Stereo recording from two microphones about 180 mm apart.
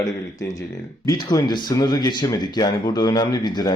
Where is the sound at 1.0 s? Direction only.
20° left (ahead or behind).